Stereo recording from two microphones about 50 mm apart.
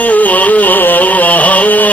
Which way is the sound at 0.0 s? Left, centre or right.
Left.